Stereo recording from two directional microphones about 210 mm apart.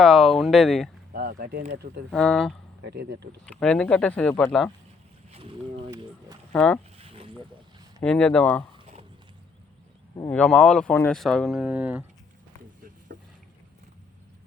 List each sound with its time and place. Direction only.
0.0 s speech: centre (ahead or behind)
1.1 s insect: 45° right (ahead or behind)
1.7 s speech: 50° right (ahead or behind)
2.0 s speech: 5° left (ahead or behind)
2.8 s speech: 55° right (ahead or behind)
3.4 s speech: 5° left (ahead or behind)
5.3 s speech: 25° right (ahead or behind)
6.5 s speech: 5° left (ahead or behind)
7.0 s a sound: 25° right (ahead or behind)
8.0 s speech: 5° left (ahead or behind)
8.7 s a sound: 30° right (ahead or behind)
10.2 s speech: 5° left (ahead or behind)